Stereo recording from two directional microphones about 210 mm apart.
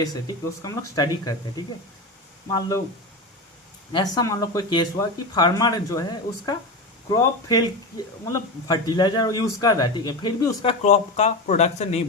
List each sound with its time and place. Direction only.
0.6 s speech: 15° left (ahead or behind)
3.9 s a man's voice: 20° left (ahead or behind)